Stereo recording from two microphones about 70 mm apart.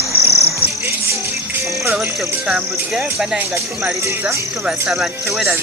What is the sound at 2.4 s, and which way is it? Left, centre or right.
Speech, centre.